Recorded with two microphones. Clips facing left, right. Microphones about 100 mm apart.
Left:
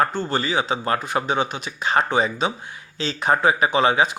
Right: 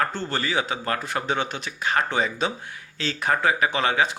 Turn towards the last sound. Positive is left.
turn(degrees=20)  # may be behind; listen again after turning